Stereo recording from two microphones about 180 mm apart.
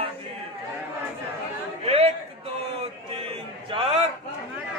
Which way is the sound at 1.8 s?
35° right (ahead or behind).